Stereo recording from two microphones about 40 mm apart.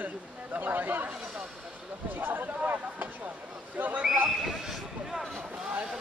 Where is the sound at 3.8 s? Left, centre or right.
Right.